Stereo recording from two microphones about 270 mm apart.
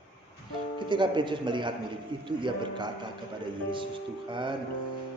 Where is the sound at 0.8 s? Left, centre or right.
Centre.